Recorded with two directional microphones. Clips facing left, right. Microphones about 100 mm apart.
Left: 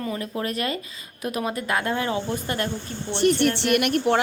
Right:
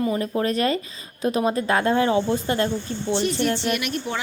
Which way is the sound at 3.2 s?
60° left (ahead or behind).